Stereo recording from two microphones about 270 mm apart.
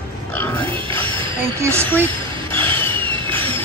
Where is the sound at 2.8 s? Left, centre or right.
Centre.